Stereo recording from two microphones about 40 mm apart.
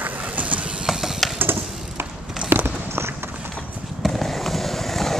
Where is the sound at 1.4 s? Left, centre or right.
Right.